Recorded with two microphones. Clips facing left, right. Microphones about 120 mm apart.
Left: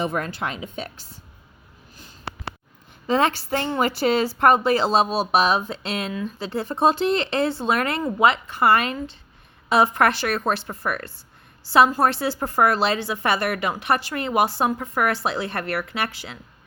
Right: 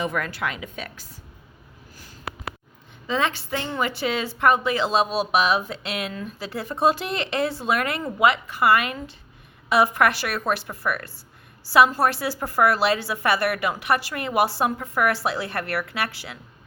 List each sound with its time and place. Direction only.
0.0 s speech: 30° left (ahead or behind)
2.0 s a sound: 25° left (ahead or behind)
3.1 s a woman's voice: 40° left (ahead or behind); by 16.4 s 20° left (ahead or behind)